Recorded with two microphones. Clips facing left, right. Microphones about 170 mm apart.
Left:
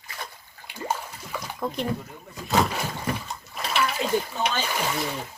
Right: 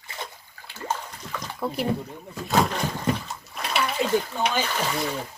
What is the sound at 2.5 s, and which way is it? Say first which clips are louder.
Roaring cats: right 1 dB; 5° left (ahead or behind).